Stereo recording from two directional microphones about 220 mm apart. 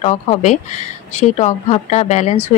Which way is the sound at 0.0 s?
30° left (ahead or behind).